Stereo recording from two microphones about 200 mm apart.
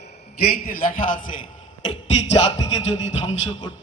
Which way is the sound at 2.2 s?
30° left (ahead or behind).